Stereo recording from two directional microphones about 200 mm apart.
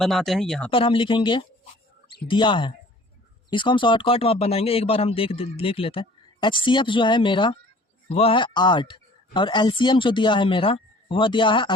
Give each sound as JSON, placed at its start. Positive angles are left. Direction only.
{"t": 0.0, "sound": "speech", "side_deg": 0}
{"t": 0.7, "sound": "speech", "side_deg": 25}